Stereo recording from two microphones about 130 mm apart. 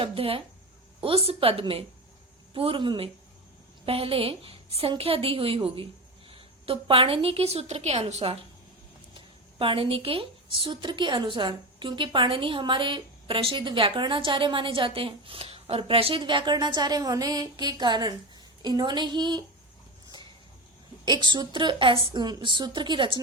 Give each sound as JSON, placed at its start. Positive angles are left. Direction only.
{"t": 0.0, "sound": "a woman's voice", "side_deg": -45}
{"t": 21.0, "sound": "a woman's voice", "side_deg": -35}